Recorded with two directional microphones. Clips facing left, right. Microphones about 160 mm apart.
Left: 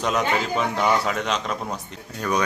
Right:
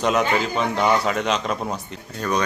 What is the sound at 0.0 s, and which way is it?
A man's voice, centre (ahead or behind).